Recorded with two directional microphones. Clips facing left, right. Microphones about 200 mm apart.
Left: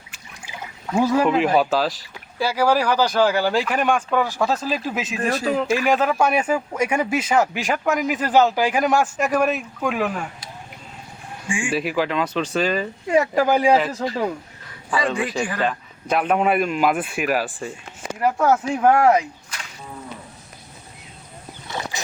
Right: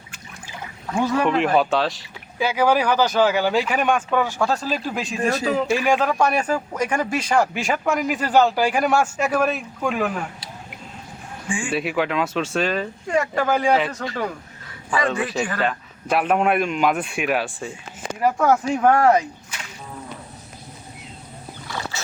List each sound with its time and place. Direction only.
1.2 s speech: 5° left (ahead or behind)
3.7 s speech: centre (ahead or behind)
11.4 s speech: 10° left (ahead or behind)
11.7 s speech: centre (ahead or behind)
14.0 s speech: 25° left (ahead or behind)
15.0 s speech: 10° left (ahead or behind)
15.6 s speech: 5° right (ahead or behind)
21.7 s wild animals: 15° left (ahead or behind)